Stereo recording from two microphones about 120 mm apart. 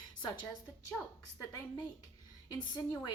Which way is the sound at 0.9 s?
10° left (ahead or behind).